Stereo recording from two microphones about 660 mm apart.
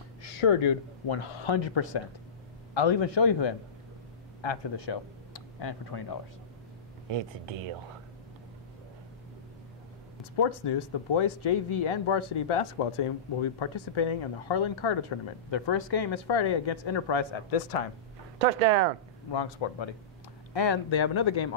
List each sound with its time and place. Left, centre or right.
0.4 s a man's voice: left
7.1 s speech: right
10.6 s speech: left
18.4 s speech: right
19.6 s speech: left